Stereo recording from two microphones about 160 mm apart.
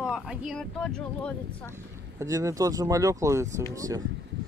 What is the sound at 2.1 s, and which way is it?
Speech, 20° right (ahead or behind).